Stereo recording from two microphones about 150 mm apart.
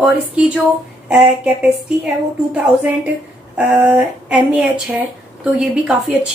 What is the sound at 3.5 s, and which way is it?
A woman's voice, 10° right (ahead or behind).